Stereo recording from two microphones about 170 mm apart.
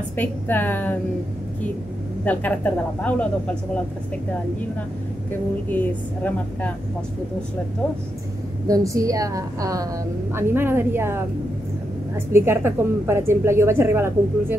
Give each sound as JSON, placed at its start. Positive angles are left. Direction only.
{"t": 0.1, "sound": "a woman's voice", "side_deg": 10}
{"t": 2.2, "sound": "a woman's voice", "side_deg": 10}
{"t": 5.7, "sound": "a woman's voice", "side_deg": 10}
{"t": 8.6, "sound": "a woman's voice", "side_deg": -20}
{"t": 12.3, "sound": "a woman's voice", "side_deg": -15}